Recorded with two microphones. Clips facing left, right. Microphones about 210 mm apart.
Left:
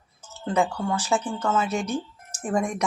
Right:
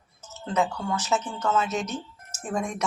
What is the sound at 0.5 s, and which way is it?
Speech, 10° left (ahead or behind).